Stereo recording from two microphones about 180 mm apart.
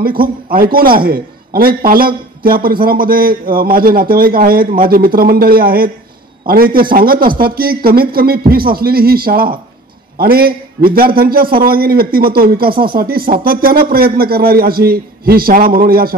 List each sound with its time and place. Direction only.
0.2 s a man's voice: 55° right (ahead or behind)